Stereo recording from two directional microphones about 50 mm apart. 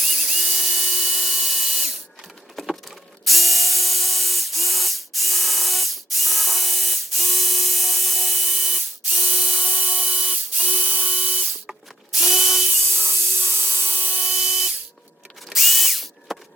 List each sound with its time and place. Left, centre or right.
0.0 s tools: centre
3.2 s spray: centre
9.6 s a sound: centre
10.6 s drill: right
11.7 s drill: centre
12.9 s vacuum cleaner: centre
13.7 s wood: centre
13.9 s wood: right
14.2 s a sound: centre
15.5 s drill: centre